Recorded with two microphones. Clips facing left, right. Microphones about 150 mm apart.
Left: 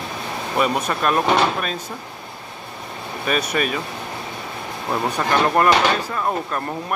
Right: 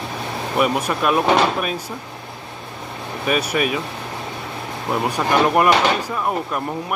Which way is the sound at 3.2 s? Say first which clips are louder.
Right 2 dB; 5° right (ahead or behind).